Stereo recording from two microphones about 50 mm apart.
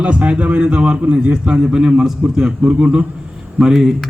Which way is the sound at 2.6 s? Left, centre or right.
Right.